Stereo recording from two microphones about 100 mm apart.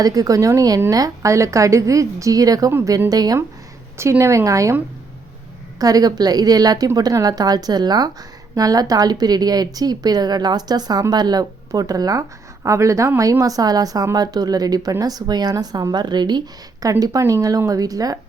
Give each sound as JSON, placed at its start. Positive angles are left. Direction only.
{"t": 0.0, "sound": "speech", "side_deg": -35}
{"t": 3.9, "sound": "speech", "side_deg": -25}
{"t": 5.8, "sound": "speech", "side_deg": -40}
{"t": 16.8, "sound": "speech", "side_deg": -35}